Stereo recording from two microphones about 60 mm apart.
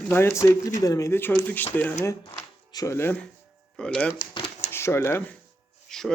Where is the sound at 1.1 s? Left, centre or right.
Left.